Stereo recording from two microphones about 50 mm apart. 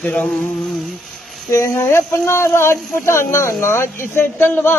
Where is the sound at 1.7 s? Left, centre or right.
Left.